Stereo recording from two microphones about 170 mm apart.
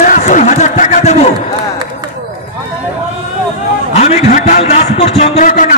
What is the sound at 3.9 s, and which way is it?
A man's voice, 40° left (ahead or behind).